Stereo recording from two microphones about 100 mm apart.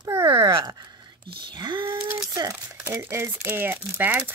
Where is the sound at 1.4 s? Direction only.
50° right (ahead or behind).